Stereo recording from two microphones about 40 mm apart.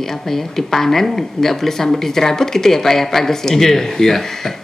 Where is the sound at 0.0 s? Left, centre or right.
Centre.